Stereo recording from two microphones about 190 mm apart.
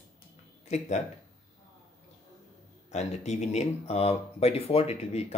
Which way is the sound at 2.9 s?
35° left (ahead or behind).